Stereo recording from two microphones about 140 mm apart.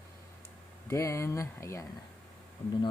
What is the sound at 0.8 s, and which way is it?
Speech, 20° left (ahead or behind).